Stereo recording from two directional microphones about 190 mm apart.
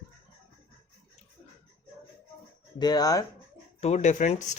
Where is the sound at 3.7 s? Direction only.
35° left (ahead or behind).